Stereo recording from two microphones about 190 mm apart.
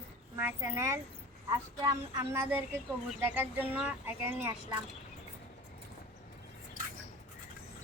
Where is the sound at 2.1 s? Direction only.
15° right (ahead or behind).